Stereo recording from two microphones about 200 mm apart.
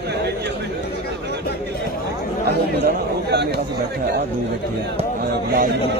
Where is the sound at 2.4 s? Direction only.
55° right (ahead or behind).